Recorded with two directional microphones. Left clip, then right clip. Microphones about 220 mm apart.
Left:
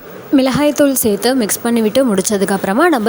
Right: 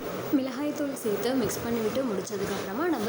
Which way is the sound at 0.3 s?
45° left (ahead or behind).